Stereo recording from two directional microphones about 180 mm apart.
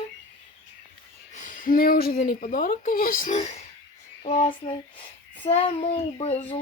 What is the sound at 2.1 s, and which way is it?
A woman's voice, 50° left (ahead or behind).